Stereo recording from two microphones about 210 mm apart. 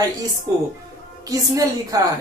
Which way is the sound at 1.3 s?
15° right (ahead or behind).